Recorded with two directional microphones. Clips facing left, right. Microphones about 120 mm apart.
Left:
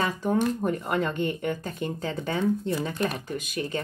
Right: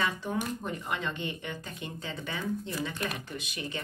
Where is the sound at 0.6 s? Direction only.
45° left (ahead or behind).